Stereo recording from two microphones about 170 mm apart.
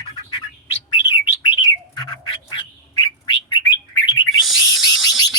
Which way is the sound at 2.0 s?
25° left (ahead or behind).